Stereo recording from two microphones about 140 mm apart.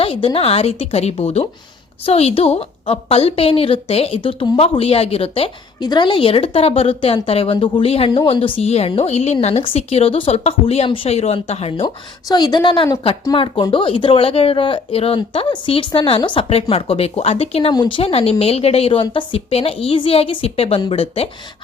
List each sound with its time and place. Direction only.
0.0 s speech: 40° left (ahead or behind)
5.8 s speech: 30° left (ahead or behind)
12.3 s speech: 30° left (ahead or behind)